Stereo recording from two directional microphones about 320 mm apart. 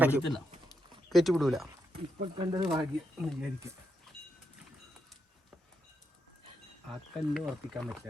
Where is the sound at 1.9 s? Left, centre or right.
Centre.